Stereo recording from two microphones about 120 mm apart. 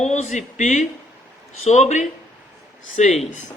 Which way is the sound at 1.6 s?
75° left (ahead or behind).